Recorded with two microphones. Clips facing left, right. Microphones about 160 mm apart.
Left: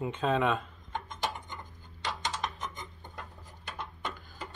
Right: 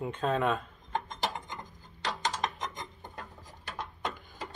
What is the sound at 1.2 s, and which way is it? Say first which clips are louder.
Dishes: right 1 dB; 90° right.